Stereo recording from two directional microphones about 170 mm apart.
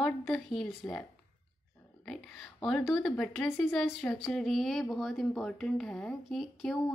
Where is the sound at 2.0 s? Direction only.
Centre (ahead or behind).